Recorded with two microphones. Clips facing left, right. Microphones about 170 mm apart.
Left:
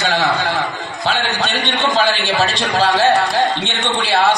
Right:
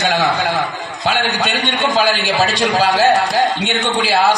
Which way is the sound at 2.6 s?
10° right (ahead or behind).